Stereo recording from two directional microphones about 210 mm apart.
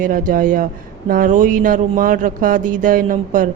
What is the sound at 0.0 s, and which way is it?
Speech, 40° right (ahead or behind).